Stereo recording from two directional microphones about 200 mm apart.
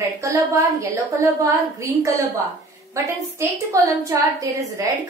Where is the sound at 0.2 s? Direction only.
15° right (ahead or behind).